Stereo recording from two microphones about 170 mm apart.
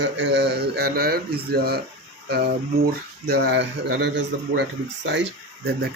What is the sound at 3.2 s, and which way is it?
Speech, 75° right (ahead or behind).